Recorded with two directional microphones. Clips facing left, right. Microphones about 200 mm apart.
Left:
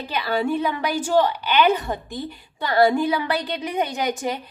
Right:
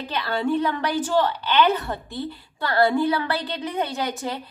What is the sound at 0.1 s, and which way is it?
A woman's voice, 10° left (ahead or behind).